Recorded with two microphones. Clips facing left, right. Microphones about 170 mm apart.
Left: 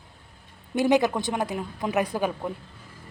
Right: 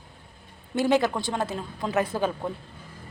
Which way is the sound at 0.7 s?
15° left (ahead or behind).